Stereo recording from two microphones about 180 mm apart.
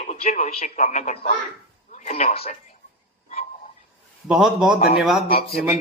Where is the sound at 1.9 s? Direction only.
40° left (ahead or behind).